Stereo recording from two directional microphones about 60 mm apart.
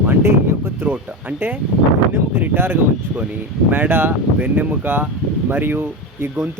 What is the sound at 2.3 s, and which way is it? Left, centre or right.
Speech, right.